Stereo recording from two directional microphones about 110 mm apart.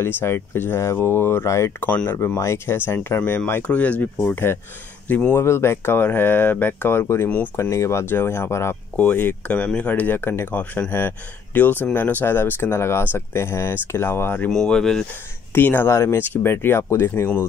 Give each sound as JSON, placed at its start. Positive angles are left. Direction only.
{"t": 0.0, "sound": "speech", "side_deg": 20}
{"t": 1.9, "sound": "speech", "side_deg": 15}
{"t": 2.1, "sound": "speech", "side_deg": 25}
{"t": 14.6, "sound": "speech", "side_deg": 5}
{"t": 15.5, "sound": "speech", "side_deg": 15}